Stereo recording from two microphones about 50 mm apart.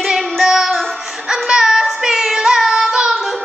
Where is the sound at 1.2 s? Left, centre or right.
Centre.